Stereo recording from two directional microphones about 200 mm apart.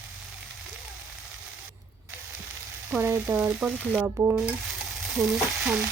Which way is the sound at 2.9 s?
10° right (ahead or behind).